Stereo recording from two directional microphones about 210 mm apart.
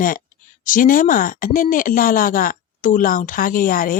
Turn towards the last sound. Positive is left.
turn(degrees=40)  # may be behind; listen again after turning